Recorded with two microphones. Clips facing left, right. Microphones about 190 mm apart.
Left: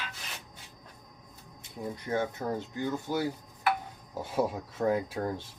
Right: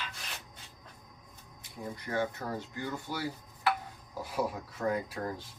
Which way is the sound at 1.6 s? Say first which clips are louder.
Left 3 dB; 20° left (ahead or behind).